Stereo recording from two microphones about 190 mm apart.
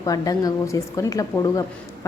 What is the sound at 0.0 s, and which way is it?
A woman's voice, 20° left (ahead or behind).